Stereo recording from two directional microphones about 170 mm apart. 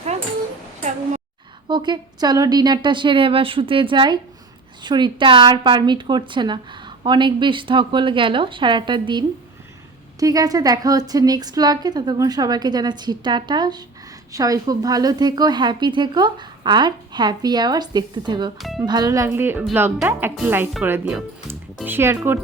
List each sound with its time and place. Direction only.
1.6 s a woman's voice: 25° right (ahead or behind)
18.6 s speech: centre (ahead or behind)
18.9 s a woman's voice: 25° right (ahead or behind)